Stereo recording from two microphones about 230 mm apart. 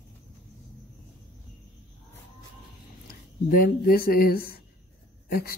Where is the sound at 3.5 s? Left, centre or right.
Left.